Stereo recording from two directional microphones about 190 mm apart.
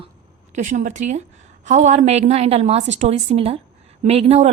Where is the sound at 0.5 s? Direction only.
40° right (ahead or behind).